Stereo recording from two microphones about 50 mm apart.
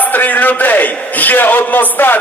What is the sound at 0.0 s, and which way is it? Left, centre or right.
A man's voice, left.